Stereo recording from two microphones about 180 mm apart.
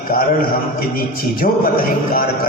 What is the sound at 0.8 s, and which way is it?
Speech, 55° left (ahead or behind).